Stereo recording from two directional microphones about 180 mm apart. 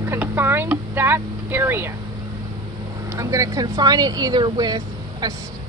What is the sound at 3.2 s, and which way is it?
Speech, 20° right (ahead or behind).